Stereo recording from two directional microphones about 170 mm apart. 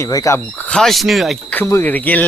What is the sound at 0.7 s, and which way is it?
Speech, 5° left (ahead or behind).